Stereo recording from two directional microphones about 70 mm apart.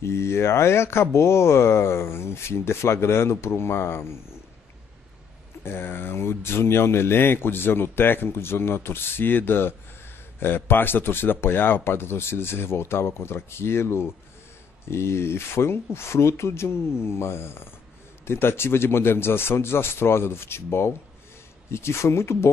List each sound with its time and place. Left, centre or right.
0.0 s speech: left
5.6 s speech: left